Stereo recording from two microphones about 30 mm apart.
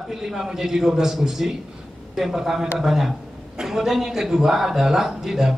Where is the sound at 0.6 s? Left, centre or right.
Centre.